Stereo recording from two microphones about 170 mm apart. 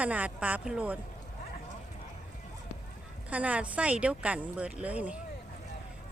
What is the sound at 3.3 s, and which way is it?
Speech, 10° right (ahead or behind).